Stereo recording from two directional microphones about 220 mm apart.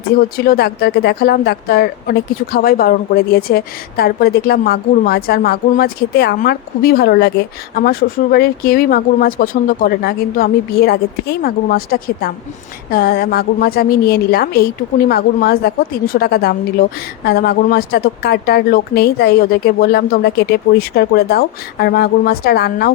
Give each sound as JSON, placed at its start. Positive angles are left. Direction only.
{"t": 0.3, "sound": "a woman's voice", "side_deg": 45}